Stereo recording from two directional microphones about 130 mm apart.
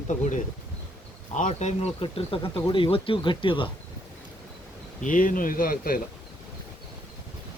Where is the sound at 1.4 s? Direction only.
70° left (ahead or behind).